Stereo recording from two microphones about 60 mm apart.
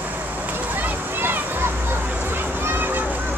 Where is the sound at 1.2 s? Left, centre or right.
Right.